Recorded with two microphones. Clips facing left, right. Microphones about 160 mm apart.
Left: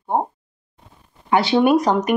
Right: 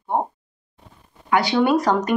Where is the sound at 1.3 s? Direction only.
25° left (ahead or behind).